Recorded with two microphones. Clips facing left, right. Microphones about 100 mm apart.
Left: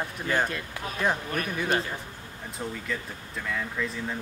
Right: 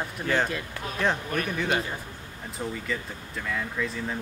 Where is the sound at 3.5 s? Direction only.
Centre (ahead or behind).